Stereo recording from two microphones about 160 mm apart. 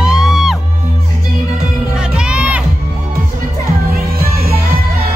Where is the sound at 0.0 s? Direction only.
5° right (ahead or behind).